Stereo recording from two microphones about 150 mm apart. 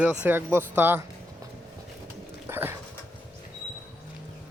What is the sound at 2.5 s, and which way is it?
Dog, 15° right (ahead or behind).